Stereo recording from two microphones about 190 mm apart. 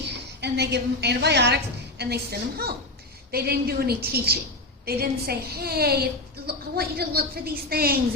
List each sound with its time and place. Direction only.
0.4 s a woman's voice: 60° right (ahead or behind)